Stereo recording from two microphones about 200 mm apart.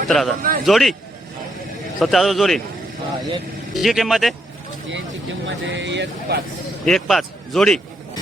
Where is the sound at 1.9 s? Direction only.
Centre (ahead or behind).